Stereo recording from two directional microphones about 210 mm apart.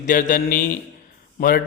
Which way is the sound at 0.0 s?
40° left (ahead or behind).